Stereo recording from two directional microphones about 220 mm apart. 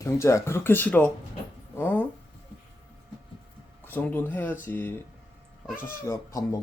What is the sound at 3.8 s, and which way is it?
Speech, 10° left (ahead or behind).